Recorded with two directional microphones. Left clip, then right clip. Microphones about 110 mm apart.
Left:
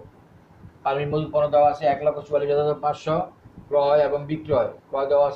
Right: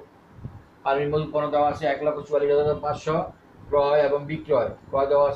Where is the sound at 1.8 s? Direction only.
65° left (ahead or behind).